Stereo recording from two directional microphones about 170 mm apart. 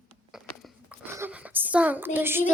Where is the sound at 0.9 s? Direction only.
10° right (ahead or behind).